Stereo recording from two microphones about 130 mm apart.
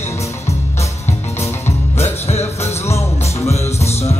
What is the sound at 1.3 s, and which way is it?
Music, 20° left (ahead or behind).